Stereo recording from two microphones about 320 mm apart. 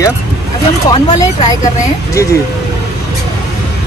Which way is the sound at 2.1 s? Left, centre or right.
Centre.